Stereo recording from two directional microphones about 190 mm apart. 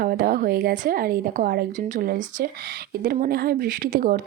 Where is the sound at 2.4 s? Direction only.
55° right (ahead or behind).